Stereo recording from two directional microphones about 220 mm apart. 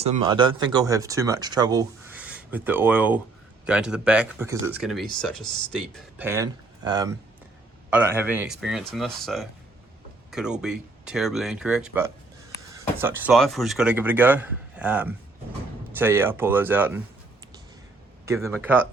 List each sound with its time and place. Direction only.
0.0 s speech: 25° right (ahead or behind); by 5.8 s 5° left (ahead or behind)
6.1 s speech: 10° right (ahead or behind)
18.4 s speech: 10° right (ahead or behind)